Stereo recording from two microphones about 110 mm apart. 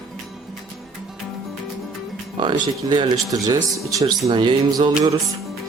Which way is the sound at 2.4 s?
45° right (ahead or behind).